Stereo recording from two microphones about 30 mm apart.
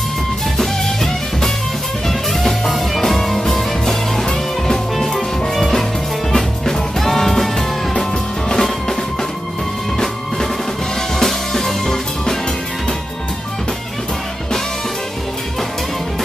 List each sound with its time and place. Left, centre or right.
0.6 s music: centre
5.6 s music: centre
8.5 s music: centre
11.5 s music: centre